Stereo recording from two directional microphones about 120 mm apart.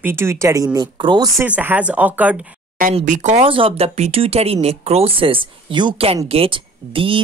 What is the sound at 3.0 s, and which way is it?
Speech, 85° right.